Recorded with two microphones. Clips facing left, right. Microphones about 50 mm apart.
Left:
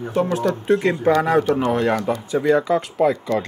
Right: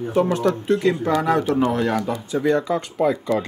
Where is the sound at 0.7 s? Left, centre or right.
Left.